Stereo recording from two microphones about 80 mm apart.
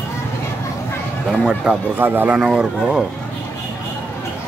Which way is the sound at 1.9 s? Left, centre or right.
Right.